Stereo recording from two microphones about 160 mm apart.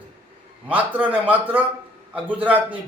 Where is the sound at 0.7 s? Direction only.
10° right (ahead or behind).